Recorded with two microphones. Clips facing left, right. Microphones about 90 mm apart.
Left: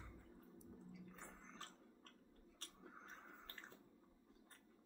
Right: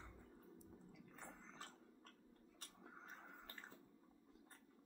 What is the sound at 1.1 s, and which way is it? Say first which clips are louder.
Chewing: right 1 dB; 5° right (ahead or behind).